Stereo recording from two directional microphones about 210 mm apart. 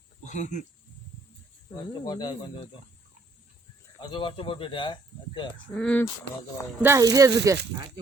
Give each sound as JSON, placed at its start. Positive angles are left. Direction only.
{"t": 0.3, "sound": "speech", "side_deg": 35}
{"t": 1.9, "sound": "speech", "side_deg": 20}
{"t": 4.0, "sound": "speech", "side_deg": 20}
{"t": 5.7, "sound": "speech", "side_deg": 5}
{"t": 6.8, "sound": "speech", "side_deg": -15}